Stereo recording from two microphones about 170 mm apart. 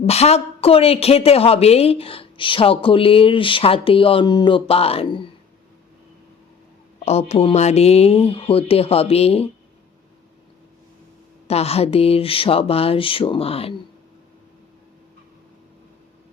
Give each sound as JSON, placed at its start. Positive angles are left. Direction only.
{"t": 0.0, "sound": "speech", "side_deg": 40}
{"t": 7.0, "sound": "speech", "side_deg": 40}
{"t": 11.4, "sound": "speech", "side_deg": 35}